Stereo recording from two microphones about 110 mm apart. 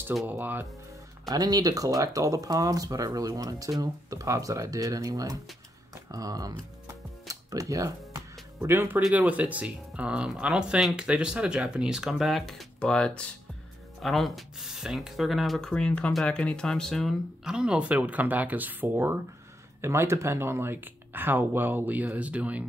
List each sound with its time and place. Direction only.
0.3 s speech: 15° right (ahead or behind)
1.3 s speech: 35° right (ahead or behind)
6.9 s music: 30° right (ahead or behind)
9.1 s speech: 15° right (ahead or behind)